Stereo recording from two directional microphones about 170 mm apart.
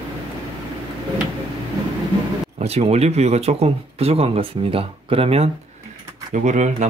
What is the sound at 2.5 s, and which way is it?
Speech, 40° right (ahead or behind).